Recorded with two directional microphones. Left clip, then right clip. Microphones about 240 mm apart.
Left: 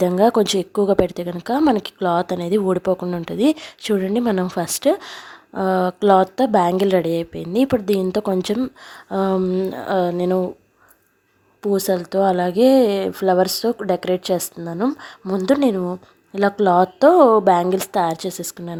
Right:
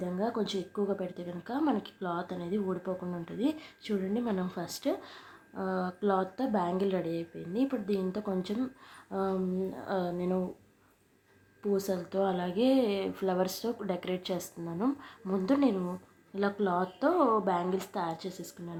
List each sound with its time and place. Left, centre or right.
0.0 s a woman's voice: left
11.6 s speech: left